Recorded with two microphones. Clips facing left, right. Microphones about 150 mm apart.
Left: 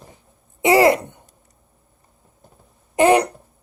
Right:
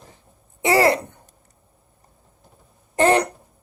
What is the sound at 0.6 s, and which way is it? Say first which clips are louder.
Throat clearing: left 3 dB; 15° left (ahead or behind).